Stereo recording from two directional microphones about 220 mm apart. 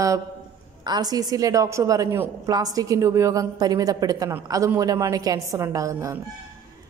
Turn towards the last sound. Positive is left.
turn(degrees=-15)  # may be behind; listen again after turning